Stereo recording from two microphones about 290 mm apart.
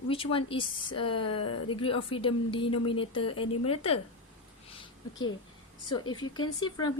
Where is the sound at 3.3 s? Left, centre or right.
Left.